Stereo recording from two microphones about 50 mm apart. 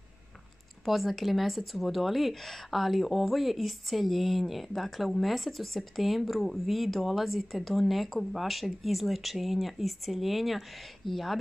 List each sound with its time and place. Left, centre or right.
0.8 s speech: centre